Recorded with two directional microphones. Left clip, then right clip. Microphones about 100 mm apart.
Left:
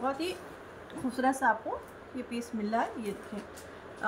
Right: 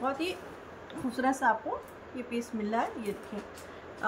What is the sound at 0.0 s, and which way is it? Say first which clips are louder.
A woman's voice: right 1 dB; 10° right (ahead or behind).